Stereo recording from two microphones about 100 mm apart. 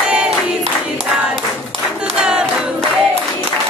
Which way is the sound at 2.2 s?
10° right (ahead or behind).